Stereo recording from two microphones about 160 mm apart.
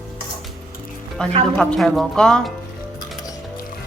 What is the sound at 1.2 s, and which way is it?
Speech, 5° left (ahead or behind).